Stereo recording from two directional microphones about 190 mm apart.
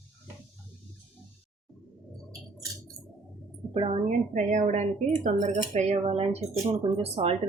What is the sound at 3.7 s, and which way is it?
Speech, 30° right (ahead or behind).